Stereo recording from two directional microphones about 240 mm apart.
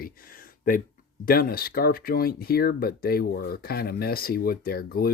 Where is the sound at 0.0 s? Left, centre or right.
Left.